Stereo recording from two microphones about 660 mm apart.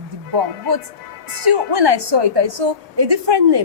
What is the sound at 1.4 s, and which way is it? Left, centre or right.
A woman's voice, right.